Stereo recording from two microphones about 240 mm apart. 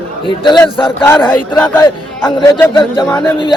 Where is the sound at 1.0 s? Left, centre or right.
Centre.